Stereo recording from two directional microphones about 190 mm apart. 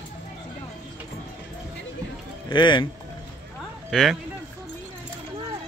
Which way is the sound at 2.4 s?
25° left (ahead or behind).